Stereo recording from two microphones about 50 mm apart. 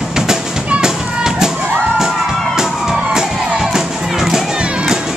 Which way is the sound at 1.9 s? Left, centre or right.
Centre.